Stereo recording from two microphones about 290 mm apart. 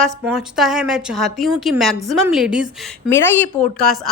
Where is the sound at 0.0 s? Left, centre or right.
Centre.